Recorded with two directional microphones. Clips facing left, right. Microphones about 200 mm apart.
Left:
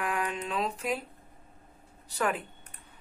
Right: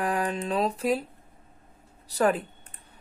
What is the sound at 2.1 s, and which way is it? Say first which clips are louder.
Speech: right 7 dB; 35° right (ahead or behind).